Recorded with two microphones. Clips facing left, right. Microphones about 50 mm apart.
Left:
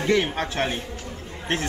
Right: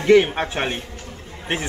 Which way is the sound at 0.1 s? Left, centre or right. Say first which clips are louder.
Right 9 dB; right.